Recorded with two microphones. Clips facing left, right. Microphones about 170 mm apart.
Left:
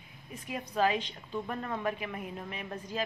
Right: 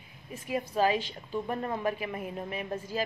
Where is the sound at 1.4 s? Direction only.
25° right (ahead or behind).